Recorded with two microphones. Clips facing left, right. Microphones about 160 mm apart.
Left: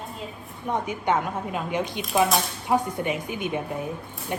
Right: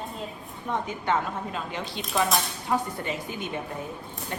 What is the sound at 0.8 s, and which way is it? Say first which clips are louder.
Speech: left 2 dB; 15° left (ahead or behind).